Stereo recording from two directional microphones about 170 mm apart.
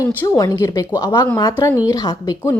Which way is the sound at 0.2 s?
20° left (ahead or behind).